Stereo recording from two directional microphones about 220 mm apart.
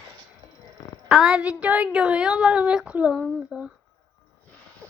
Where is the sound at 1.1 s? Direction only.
Centre (ahead or behind).